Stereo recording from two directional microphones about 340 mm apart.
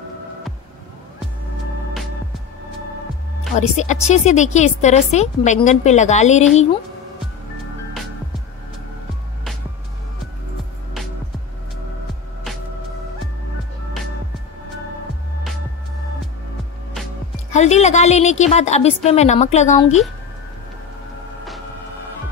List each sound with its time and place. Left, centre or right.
3.7 s a woman's voice: centre
17.5 s a woman's voice: centre